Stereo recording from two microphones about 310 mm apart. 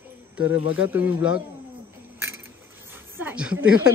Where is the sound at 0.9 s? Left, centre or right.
Centre.